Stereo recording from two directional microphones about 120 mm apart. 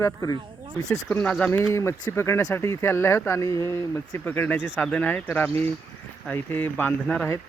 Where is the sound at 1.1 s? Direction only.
10° left (ahead or behind).